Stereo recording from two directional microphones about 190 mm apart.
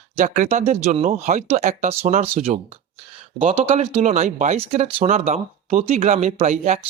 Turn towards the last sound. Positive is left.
turn(degrees=-40)  # may be behind; listen again after turning